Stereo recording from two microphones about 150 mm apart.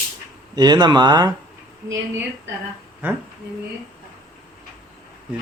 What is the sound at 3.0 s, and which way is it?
Speech, 15° right (ahead or behind).